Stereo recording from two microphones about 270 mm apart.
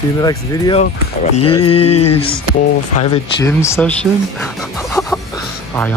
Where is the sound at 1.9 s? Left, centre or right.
Left.